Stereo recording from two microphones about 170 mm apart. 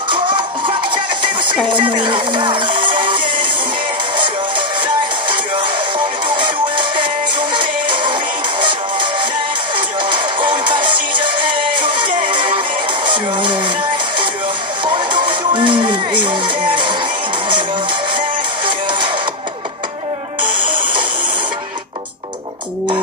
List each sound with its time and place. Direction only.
0.1 s music: 30° right (ahead or behind)
14.9 s music: 30° right (ahead or behind)
18.7 s music: 30° right (ahead or behind)
20.4 s music: 30° right (ahead or behind)